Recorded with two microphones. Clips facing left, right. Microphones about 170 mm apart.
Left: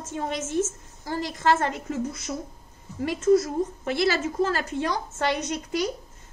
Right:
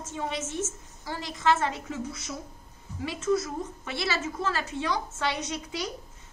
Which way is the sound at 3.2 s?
40° left (ahead or behind).